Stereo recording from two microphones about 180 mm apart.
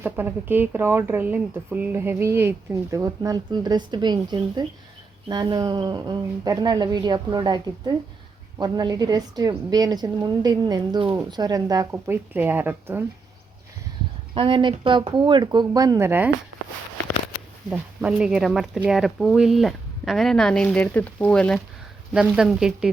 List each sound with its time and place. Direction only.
0.0 s a woman's voice: 10° right (ahead or behind)
14.3 s a woman's voice: 30° right (ahead or behind); by 16.3 s 10° right (ahead or behind)
17.7 s speech: 5° right (ahead or behind)